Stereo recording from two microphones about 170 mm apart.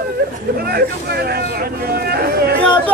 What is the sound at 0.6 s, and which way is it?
Vehicle, 65° right (ahead or behind).